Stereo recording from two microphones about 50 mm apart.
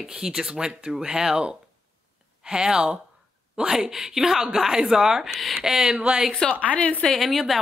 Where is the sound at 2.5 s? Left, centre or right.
Centre.